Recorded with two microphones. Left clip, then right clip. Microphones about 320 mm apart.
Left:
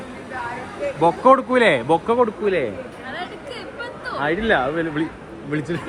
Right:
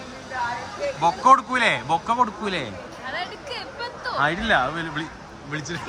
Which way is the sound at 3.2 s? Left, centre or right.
Right.